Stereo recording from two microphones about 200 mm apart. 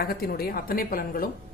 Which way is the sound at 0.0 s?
50° left (ahead or behind).